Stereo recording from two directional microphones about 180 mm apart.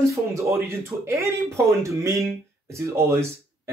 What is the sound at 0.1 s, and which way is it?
Speech, 15° right (ahead or behind).